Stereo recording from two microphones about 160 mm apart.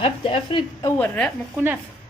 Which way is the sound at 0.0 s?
30° left (ahead or behind).